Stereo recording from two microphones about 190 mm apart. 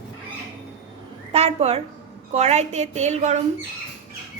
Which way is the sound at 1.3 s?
30° right (ahead or behind).